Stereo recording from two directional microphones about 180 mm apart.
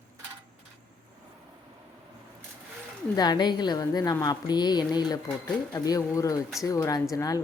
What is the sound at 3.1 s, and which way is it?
A woman's voice, 20° left (ahead or behind).